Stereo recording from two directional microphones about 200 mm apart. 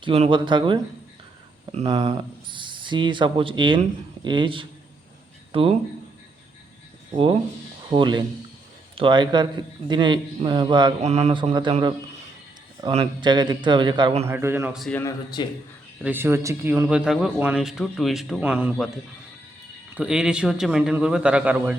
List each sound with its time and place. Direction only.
0.0 s speech: 25° right (ahead or behind)
1.9 s speech: 20° right (ahead or behind)
7.9 s speech: 25° right (ahead or behind)
13.0 s speech: 20° right (ahead or behind)
14.3 s speech: 10° right (ahead or behind)
14.8 s a man's voice: 5° left (ahead or behind)
15.4 s a man's voice: 20° left (ahead or behind)
16.0 s speech: 10° right (ahead or behind)
19.9 s a man's voice: 5° right (ahead or behind)